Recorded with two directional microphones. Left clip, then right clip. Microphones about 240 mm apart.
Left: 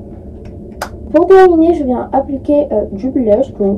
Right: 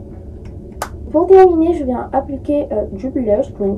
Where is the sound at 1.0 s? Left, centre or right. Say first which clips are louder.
Left 2 dB; left.